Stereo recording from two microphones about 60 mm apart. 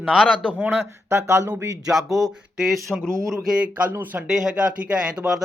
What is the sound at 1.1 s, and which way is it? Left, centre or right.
Speech, right.